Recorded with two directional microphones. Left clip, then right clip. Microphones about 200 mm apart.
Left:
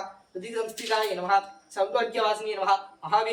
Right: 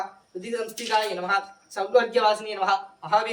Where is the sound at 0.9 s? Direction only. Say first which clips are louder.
Right 1 dB; 20° right (ahead or behind).